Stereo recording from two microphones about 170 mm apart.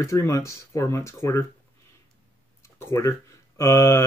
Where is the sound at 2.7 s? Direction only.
15° left (ahead or behind).